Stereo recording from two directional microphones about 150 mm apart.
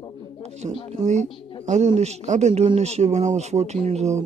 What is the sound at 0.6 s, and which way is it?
Speech, 35° right (ahead or behind).